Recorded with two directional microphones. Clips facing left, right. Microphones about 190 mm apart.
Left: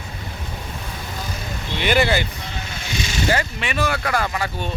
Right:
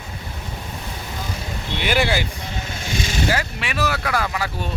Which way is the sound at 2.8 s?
50° right (ahead or behind).